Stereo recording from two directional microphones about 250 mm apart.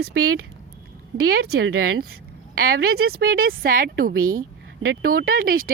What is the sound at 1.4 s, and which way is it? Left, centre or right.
Speech, right.